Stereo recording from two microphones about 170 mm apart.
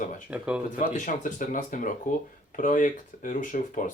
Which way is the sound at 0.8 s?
50° left (ahead or behind).